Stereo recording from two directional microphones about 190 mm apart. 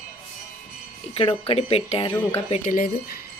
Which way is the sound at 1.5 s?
30° left (ahead or behind).